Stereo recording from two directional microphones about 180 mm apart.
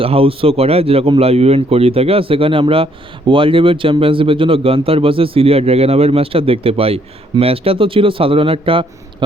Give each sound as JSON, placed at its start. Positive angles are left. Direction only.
{"t": 0.0, "sound": "speech", "side_deg": -30}